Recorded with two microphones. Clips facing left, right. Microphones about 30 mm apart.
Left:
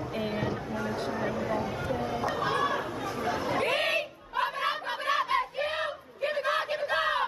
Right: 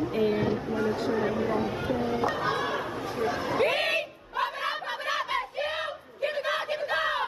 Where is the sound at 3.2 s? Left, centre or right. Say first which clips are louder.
Right 2 dB; centre.